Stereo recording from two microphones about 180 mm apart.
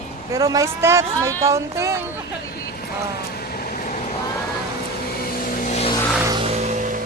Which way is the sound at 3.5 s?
50° left (ahead or behind).